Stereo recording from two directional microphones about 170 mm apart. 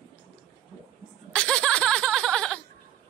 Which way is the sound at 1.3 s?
5° left (ahead or behind).